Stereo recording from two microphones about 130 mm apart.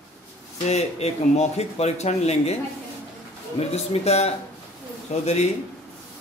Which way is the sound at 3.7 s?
55° left (ahead or behind).